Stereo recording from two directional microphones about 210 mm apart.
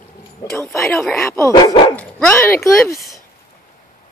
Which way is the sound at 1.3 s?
15° left (ahead or behind).